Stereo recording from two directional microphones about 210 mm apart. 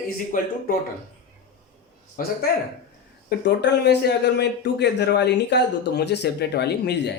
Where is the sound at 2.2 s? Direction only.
40° left (ahead or behind).